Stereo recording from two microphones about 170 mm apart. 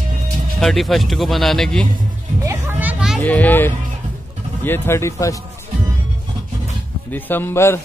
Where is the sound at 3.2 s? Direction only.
10° left (ahead or behind).